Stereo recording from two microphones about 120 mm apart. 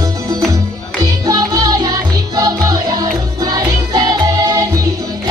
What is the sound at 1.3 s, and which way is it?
Music, 30° right (ahead or behind).